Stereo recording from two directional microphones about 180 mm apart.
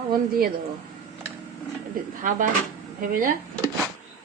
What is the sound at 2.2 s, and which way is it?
Speech, 45° right (ahead or behind).